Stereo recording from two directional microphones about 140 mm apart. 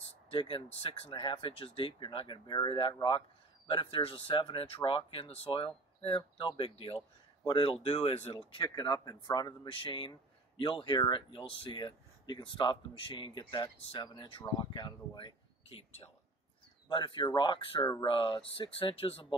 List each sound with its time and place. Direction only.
0.3 s speech: 35° left (ahead or behind)
8.4 s speech: 35° left (ahead or behind)